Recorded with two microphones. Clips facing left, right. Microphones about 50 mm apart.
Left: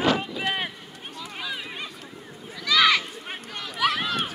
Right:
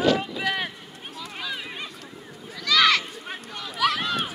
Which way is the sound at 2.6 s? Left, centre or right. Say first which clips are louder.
Even; centre.